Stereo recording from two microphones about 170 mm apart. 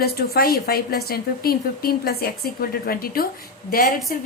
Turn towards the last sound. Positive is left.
turn(degrees=55)  # may be behind; listen again after turning